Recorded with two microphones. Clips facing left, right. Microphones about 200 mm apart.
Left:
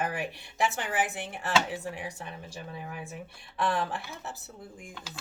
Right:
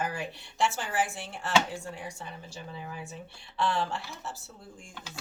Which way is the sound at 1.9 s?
60° left (ahead or behind).